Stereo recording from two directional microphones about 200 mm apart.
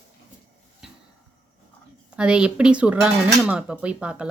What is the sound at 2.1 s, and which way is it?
Speech, 5° right (ahead or behind).